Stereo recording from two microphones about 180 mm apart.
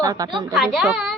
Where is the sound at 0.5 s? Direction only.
5° right (ahead or behind).